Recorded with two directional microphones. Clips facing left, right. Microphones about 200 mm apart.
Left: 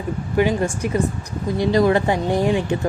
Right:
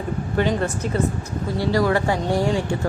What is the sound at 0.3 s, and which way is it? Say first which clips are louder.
A woman's voice: left 3 dB; 10° left (ahead or behind).